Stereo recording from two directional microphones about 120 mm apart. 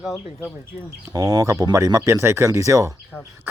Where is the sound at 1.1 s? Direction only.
30° right (ahead or behind).